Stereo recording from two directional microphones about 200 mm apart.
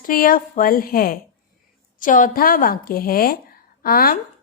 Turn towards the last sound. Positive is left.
turn(degrees=45)  # may be behind; listen again after turning